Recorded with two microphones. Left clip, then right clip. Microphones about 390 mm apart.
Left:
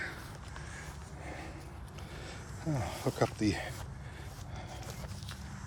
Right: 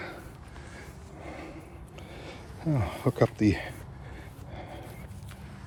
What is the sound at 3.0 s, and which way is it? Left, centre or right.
Speech, right.